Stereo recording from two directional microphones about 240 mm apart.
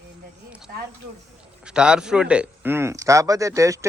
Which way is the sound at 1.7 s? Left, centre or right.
Centre.